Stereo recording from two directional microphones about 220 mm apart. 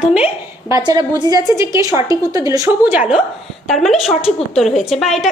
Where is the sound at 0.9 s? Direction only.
20° right (ahead or behind).